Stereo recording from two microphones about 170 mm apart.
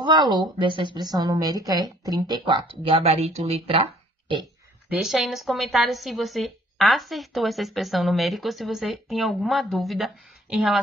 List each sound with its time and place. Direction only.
0.0 s a woman's voice: 25° right (ahead or behind)
4.8 s a woman's voice: 5° right (ahead or behind)